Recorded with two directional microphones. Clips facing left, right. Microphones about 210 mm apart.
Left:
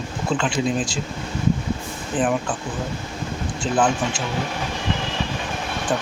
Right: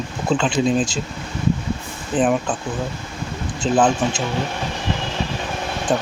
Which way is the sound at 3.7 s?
20° right (ahead or behind).